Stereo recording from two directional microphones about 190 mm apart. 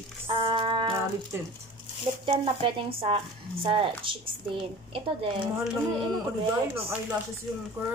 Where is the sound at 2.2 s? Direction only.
25° right (ahead or behind).